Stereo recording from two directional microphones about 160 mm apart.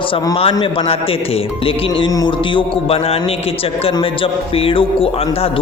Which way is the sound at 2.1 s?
30° left (ahead or behind).